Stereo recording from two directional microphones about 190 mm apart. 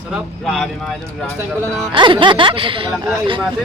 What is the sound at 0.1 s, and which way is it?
Speech, centre (ahead or behind).